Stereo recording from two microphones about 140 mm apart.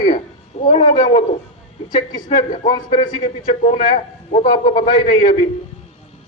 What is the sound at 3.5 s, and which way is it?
Speech, 55° left (ahead or behind).